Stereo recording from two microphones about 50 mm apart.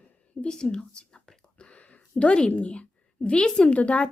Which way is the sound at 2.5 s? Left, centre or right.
Left.